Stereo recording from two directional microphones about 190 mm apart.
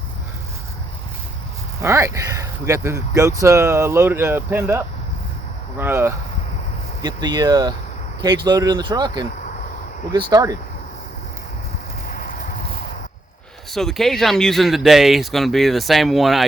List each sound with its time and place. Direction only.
1.8 s speech: 15° right (ahead or behind)
12.0 s clip-clop: 45° left (ahead or behind)
13.7 s speech: centre (ahead or behind)